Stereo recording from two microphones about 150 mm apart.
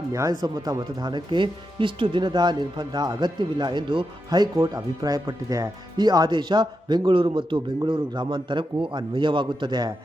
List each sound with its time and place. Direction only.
0.1 s speech: 20° right (ahead or behind)